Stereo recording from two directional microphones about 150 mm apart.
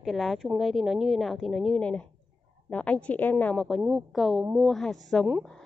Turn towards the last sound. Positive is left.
turn(degrees=0)  # may be behind; listen again after turning